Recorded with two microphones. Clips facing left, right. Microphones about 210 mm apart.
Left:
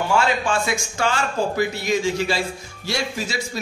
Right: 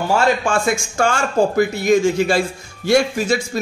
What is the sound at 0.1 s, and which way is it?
A man's voice, 50° right (ahead or behind).